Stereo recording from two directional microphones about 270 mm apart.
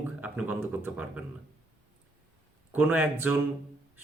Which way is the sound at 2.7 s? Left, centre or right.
Centre.